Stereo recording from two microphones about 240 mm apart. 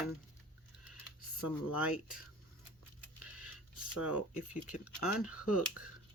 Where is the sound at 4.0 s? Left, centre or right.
Centre.